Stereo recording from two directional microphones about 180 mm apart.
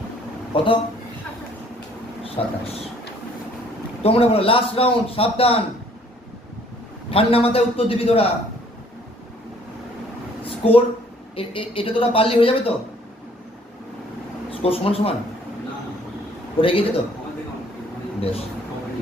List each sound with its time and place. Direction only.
0.5 s speech: 30° left (ahead or behind)
2.2 s speech: 30° left (ahead or behind)
4.0 s a man's voice: 30° left (ahead or behind)
7.1 s a man's voice: 30° left (ahead or behind)
10.4 s a sound: 30° left (ahead or behind)
11.3 s a man's voice: 30° left (ahead or behind)
14.5 s speech: 30° left (ahead or behind)
16.6 s a man's voice: 30° left (ahead or behind)
18.2 s speech: 35° left (ahead or behind)